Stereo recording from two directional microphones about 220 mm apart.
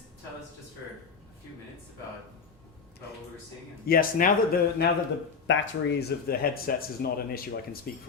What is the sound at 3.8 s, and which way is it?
Speech, 45° left (ahead or behind).